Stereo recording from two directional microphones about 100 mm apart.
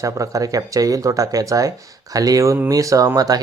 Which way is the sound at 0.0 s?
35° right (ahead or behind).